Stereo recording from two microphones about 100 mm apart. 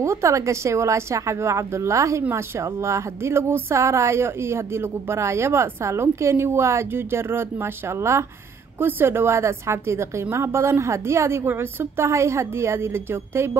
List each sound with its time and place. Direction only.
0.0 s a woman's voice: 30° right (ahead or behind)